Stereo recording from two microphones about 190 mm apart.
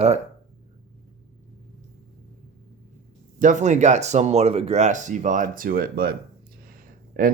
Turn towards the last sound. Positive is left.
turn(degrees=-45)  # may be behind; listen again after turning